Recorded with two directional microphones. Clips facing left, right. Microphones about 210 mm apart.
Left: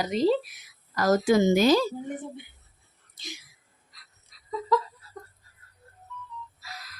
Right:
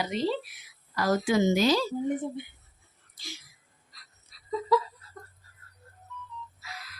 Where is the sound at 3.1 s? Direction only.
20° left (ahead or behind).